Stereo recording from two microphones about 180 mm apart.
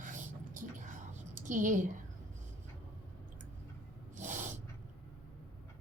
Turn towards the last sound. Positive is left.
turn(degrees=-45)  # may be behind; listen again after turning